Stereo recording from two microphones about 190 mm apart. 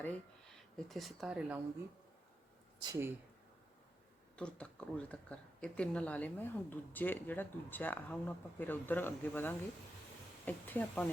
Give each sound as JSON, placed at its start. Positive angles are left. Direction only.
{"t": 0.0, "sound": "speech", "side_deg": 5}
{"t": 2.8, "sound": "speech", "side_deg": -20}
{"t": 4.4, "sound": "speech", "side_deg": 5}